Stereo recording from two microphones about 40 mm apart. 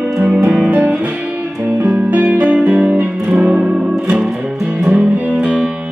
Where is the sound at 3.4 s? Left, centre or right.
Right.